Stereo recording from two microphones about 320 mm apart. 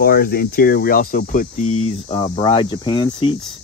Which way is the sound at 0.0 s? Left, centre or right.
Left.